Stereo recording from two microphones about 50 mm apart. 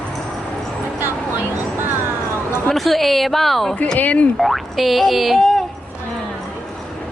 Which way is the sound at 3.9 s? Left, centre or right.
Left.